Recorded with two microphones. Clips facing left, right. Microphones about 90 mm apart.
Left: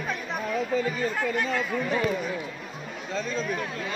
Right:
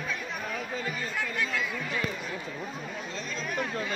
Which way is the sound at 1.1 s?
40° left (ahead or behind).